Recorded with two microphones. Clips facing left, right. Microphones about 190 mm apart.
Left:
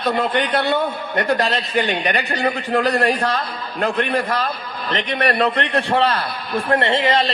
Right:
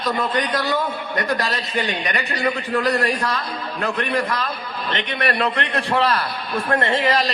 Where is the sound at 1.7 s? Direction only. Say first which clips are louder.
Left 4 dB; 65° left (ahead or behind).